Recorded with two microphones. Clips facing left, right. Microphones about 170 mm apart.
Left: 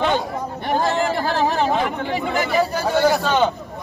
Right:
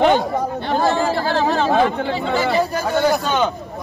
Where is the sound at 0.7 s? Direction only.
15° left (ahead or behind).